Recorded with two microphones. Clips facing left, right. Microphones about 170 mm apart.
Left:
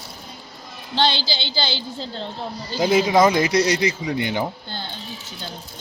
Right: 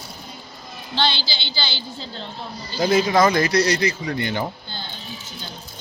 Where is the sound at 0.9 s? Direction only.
45° left (ahead or behind).